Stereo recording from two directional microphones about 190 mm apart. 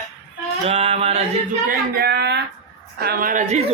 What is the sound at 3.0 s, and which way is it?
Speech, 50° right (ahead or behind).